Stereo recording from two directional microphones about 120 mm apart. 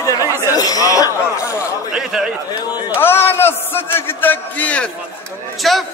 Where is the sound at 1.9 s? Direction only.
5° right (ahead or behind).